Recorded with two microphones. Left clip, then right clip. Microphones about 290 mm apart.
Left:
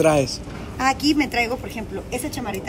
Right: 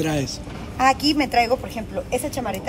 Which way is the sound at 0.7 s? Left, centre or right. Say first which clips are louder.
Right 2 dB; centre.